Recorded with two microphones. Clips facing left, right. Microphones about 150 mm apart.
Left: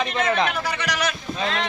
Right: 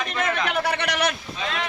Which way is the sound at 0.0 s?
35° left (ahead or behind).